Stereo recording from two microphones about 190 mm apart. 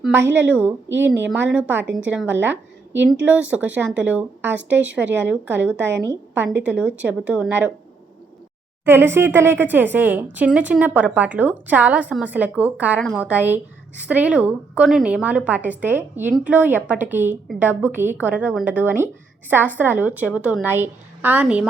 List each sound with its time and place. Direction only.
0.2 s a woman's voice: 70° right (ahead or behind)
0.4 s a woman's voice: 10° right (ahead or behind)
5.7 s a woman's voice: 70° right (ahead or behind)
6.1 s a woman's voice: 10° right (ahead or behind)
8.8 s a woman's voice: 10° right (ahead or behind)